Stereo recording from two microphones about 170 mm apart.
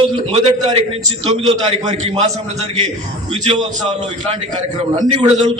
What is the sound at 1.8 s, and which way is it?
Speech, 40° right (ahead or behind).